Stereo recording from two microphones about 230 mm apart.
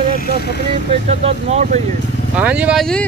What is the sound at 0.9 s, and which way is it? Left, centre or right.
Speech, right.